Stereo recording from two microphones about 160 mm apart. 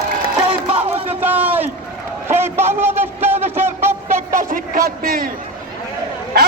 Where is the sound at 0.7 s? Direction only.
40° right (ahead or behind).